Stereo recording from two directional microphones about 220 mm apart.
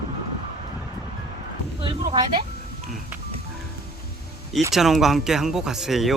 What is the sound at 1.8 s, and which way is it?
Speech, 20° right (ahead or behind).